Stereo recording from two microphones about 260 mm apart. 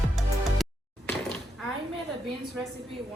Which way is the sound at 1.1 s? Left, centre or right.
Centre.